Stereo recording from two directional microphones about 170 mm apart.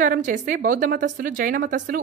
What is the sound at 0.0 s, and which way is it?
A woman's voice, 50° right (ahead or behind).